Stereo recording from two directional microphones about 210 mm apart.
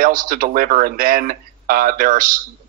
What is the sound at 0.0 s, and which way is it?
Speech, 40° right (ahead or behind).